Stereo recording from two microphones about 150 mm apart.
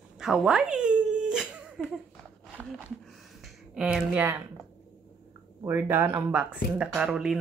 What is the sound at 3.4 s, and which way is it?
Speech, 5° right (ahead or behind).